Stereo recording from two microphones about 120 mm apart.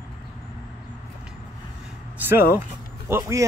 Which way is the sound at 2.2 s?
20° right (ahead or behind).